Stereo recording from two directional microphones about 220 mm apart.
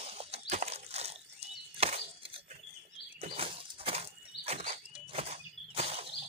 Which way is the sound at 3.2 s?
25° right (ahead or behind).